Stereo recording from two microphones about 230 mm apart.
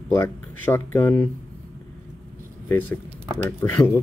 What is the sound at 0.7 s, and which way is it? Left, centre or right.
Speech, centre.